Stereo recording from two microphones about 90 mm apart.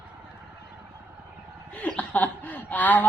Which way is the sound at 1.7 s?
15° left (ahead or behind).